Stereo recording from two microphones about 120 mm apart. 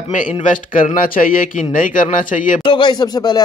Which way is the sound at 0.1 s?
90° left.